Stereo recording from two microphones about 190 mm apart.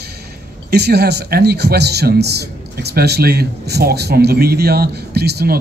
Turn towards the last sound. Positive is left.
turn(degrees=-60)  # may be behind; listen again after turning